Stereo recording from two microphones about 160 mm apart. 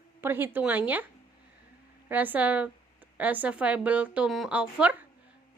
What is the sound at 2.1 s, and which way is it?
Speech, 10° right (ahead or behind).